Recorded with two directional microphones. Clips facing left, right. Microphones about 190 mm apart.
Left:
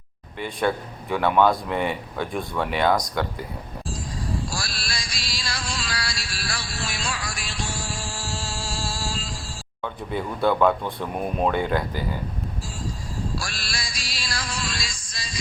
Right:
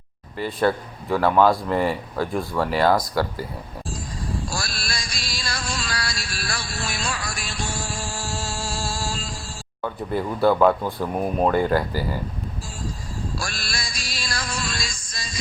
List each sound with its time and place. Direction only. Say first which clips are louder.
0.3 s speech: right 3 dB; centre (ahead or behind)
4.5 s music: right 2 dB; 45° right (ahead or behind)
9.8 s speech: right 3 dB; 5° right (ahead or behind)
13.4 s music: right 2 dB; 45° right (ahead or behind)